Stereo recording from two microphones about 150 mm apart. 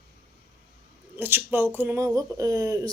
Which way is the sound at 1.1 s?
15° right (ahead or behind).